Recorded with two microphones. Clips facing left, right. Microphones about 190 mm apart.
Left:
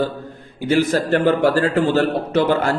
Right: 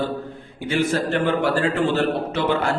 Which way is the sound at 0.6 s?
40° left (ahead or behind).